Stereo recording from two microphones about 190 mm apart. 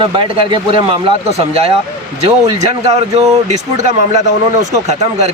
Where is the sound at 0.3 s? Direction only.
30° right (ahead or behind).